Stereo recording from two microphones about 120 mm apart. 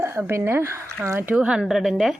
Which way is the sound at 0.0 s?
20° right (ahead or behind).